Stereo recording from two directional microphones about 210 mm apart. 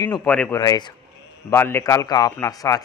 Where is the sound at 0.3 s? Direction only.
5° left (ahead or behind).